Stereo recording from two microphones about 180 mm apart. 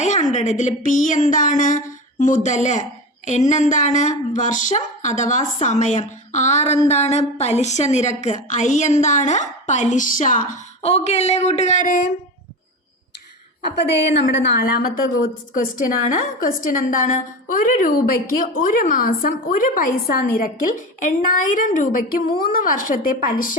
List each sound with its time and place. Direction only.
0.0 s a woman's voice: 40° left (ahead or behind)
13.8 s a woman's voice: 80° left
14.6 s a woman's voice: 55° left (ahead or behind)